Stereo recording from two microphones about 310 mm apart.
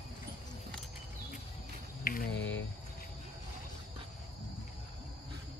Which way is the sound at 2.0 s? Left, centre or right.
Left.